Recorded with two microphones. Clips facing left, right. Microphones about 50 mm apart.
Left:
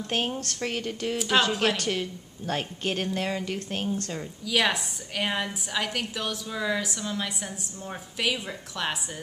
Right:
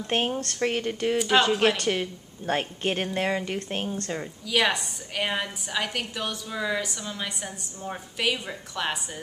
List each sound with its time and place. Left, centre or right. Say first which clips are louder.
0.0 s speech: right 2 dB; right
1.1 s a woman's voice: right 2 dB; centre
1.8 s speech: right 2 dB; centre
4.5 s a woman's voice: right 1 dB; centre